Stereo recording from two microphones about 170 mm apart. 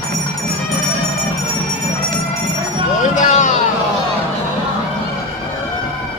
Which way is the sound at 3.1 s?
45° left (ahead or behind).